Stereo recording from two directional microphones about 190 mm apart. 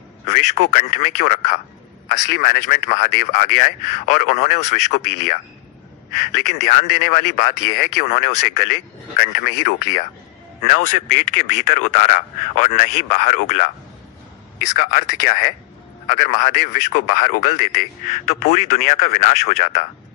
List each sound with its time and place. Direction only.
0.3 s a man's voice: 40° left (ahead or behind)
6.1 s a man's voice: 40° left (ahead or behind)
10.6 s a man's voice: 40° left (ahead or behind)
14.8 s a man's voice: 50° left (ahead or behind)